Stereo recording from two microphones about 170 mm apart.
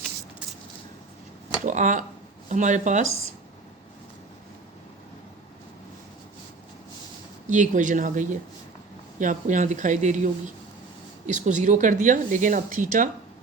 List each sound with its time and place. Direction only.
1.6 s speech: 50° right (ahead or behind)
7.4 s speech: 45° right (ahead or behind)